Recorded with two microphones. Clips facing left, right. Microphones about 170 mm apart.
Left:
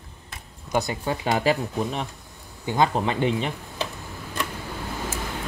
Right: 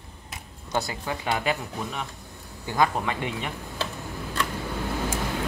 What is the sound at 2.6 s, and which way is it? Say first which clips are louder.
Speech: left 2 dB; 20° left (ahead or behind).